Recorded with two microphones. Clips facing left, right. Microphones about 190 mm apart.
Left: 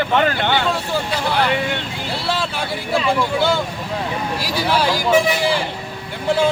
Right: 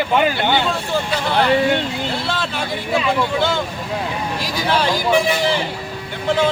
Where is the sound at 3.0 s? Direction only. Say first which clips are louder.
Left 2 dB; 10° left (ahead or behind).